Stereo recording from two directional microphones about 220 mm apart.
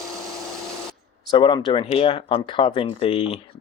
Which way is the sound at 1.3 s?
20° left (ahead or behind).